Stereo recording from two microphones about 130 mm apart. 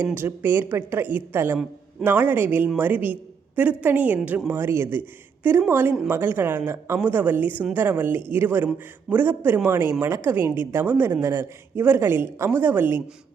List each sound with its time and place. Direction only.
0.0 s a woman's voice: 15° right (ahead or behind)